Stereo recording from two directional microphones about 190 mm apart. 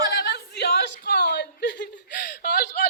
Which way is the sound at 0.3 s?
60° left (ahead or behind).